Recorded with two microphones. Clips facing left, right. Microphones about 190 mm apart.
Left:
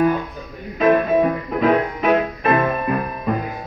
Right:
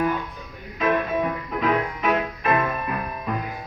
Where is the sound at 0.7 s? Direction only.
45° left (ahead or behind).